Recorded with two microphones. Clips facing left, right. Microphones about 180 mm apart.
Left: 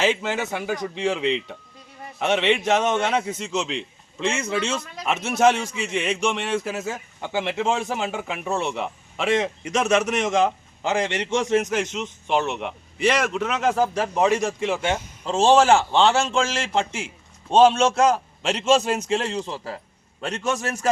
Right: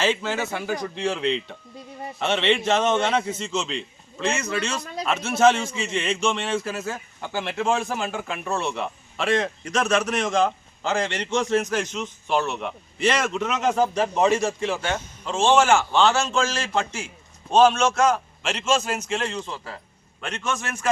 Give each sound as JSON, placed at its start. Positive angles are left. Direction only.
{"t": 0.0, "sound": "a man's voice", "side_deg": 15}
{"t": 4.2, "sound": "a man's voice", "side_deg": 25}
{"t": 15.2, "sound": "a man's voice", "side_deg": 35}